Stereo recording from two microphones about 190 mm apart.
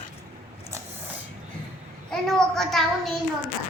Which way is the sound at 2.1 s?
Centre (ahead or behind).